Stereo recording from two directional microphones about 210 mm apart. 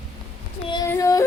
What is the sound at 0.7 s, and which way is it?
Yodeling, 15° left (ahead or behind).